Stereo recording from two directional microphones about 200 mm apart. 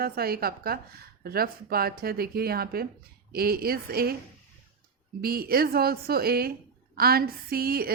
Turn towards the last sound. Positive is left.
turn(degrees=-50)  # may be behind; listen again after turning